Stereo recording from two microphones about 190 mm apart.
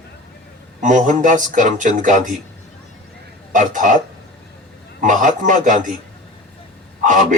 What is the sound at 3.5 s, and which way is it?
Speech, 45° right (ahead or behind).